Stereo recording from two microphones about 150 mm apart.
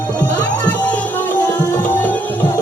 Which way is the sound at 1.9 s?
10° left (ahead or behind).